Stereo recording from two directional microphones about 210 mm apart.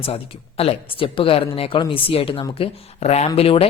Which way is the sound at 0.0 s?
25° left (ahead or behind).